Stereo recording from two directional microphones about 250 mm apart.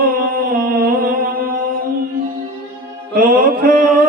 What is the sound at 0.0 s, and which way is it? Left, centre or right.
Music, right.